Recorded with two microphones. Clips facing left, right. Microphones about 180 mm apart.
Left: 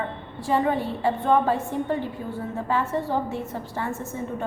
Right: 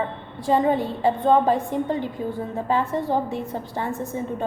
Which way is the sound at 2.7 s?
15° right (ahead or behind).